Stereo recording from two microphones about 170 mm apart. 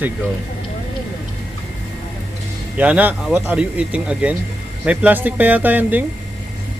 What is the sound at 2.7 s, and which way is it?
Speech, 10° right (ahead or behind).